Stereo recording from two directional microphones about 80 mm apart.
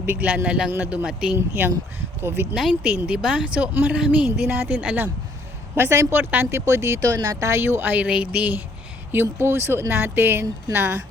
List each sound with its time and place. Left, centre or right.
0.0 s speech: right
1.4 s speech: right
3.1 s speech: centre
4.4 s speech: right
5.7 s speech: right
7.0 s speech: right
7.6 s speech: right
8.0 s speech: centre
9.1 s speech: right